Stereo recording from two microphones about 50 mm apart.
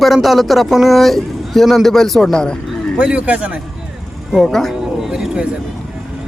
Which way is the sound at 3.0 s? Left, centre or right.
Right.